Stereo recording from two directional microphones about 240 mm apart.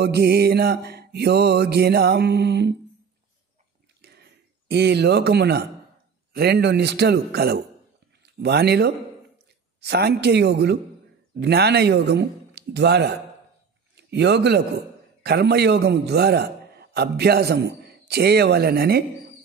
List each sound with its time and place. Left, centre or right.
0.0 s mantra: right
4.0 s a sound: right
6.3 s mantra: right
8.2 s speech: right
9.8 s mantra: right
13.9 s speech: right
15.2 s mantra: right
17.8 s speech: right